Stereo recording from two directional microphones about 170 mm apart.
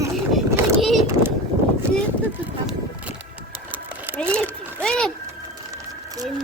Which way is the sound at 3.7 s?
10° right (ahead or behind).